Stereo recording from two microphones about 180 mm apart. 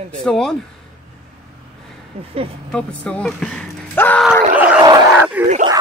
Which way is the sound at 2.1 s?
35° right (ahead or behind).